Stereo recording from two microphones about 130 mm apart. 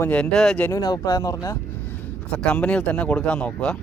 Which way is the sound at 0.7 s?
30° left (ahead or behind).